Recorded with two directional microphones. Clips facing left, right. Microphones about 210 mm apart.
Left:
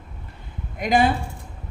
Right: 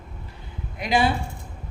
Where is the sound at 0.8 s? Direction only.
45° left (ahead or behind).